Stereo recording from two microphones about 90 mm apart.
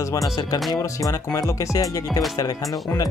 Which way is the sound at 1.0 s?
40° left (ahead or behind).